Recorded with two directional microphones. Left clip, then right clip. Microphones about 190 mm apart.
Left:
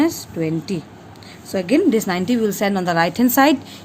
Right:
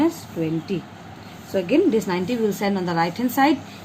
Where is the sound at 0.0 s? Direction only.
60° left (ahead or behind).